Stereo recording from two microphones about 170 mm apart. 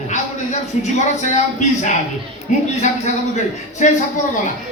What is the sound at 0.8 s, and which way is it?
Speech, 45° left (ahead or behind).